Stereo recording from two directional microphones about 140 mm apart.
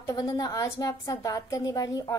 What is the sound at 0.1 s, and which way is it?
Speech, 30° left (ahead or behind).